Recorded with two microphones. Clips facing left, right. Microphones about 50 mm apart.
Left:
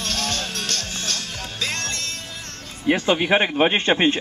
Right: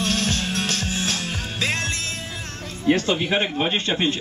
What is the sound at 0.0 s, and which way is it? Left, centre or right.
Music, centre.